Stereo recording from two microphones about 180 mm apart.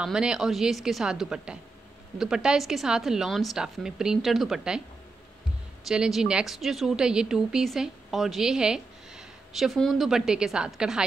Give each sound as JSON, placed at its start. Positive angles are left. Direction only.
{"t": 0.0, "sound": "a woman's voice", "side_deg": -5}
{"t": 5.9, "sound": "a woman's voice", "side_deg": 0}